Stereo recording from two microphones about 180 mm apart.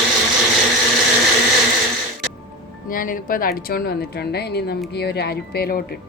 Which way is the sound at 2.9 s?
50° left (ahead or behind).